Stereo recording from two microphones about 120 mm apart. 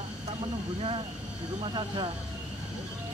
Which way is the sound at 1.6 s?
40° right (ahead or behind).